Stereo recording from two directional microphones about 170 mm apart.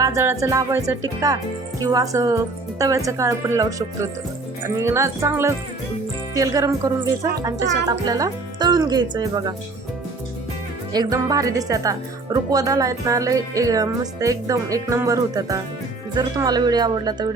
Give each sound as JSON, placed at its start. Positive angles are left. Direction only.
{"t": 0.0, "sound": "speech", "side_deg": -20}
{"t": 10.9, "sound": "speech", "side_deg": -20}